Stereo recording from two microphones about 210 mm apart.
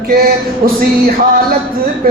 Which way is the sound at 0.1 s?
45° right (ahead or behind).